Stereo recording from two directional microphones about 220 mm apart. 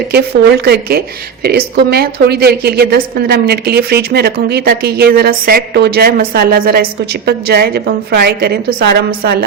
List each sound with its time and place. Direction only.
0.1 s a woman's voice: 45° right (ahead or behind)